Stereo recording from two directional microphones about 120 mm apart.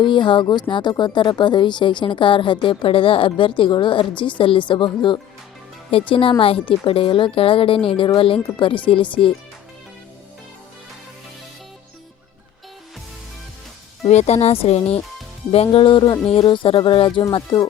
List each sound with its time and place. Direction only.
0.0 s speech: 40° left (ahead or behind)
14.0 s speech: 65° left (ahead or behind); by 17.2 s 45° left (ahead or behind)